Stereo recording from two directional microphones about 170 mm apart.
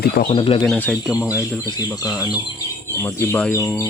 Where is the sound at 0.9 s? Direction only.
5° right (ahead or behind).